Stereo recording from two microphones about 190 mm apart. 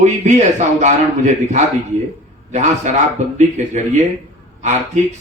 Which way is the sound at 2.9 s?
40° right (ahead or behind).